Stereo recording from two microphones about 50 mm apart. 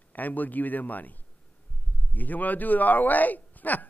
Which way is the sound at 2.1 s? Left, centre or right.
Left.